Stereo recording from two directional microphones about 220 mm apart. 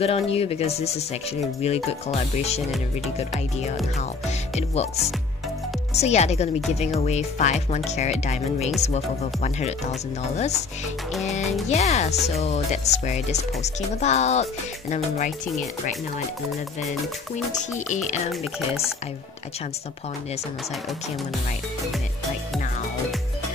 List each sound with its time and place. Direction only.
0.0 s speech: 25° left (ahead or behind)
5.9 s speech: 30° left (ahead or behind)
11.7 s speech: 30° left (ahead or behind)
17.5 s speech: 35° left (ahead or behind)